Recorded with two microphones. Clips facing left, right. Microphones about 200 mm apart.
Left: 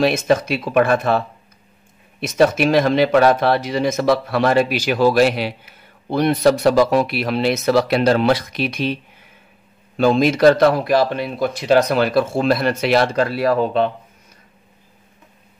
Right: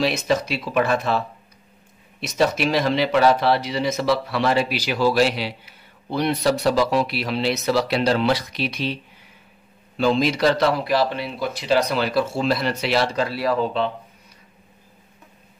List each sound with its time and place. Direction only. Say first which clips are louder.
0.0 s speech: left 5 dB; 50° left (ahead or behind)
9.9 s speech: left 4 dB; 50° left (ahead or behind)